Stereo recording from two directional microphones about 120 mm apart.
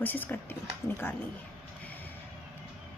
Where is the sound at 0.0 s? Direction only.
15° left (ahead or behind).